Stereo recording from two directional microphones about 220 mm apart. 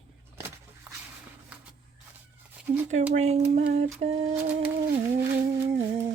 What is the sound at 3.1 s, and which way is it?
Speech, 30° right (ahead or behind).